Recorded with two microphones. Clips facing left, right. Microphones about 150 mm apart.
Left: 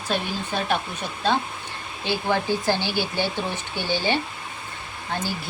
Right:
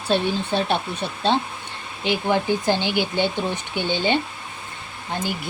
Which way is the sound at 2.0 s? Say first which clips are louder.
Right 3 dB; 20° right (ahead or behind).